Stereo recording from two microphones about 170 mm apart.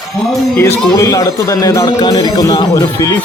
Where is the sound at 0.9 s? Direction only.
20° left (ahead or behind).